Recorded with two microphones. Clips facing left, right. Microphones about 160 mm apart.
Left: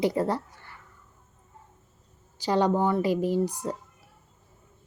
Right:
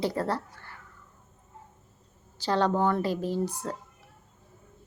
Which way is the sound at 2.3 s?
15° left (ahead or behind).